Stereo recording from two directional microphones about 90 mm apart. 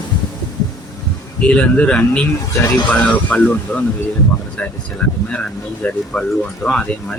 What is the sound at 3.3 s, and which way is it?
Speech, 15° left (ahead or behind).